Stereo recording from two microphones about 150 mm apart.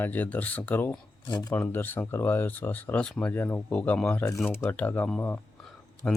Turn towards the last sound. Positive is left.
turn(degrees=5)  # may be behind; listen again after turning